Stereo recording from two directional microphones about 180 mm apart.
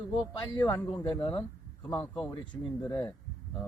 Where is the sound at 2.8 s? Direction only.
20° left (ahead or behind).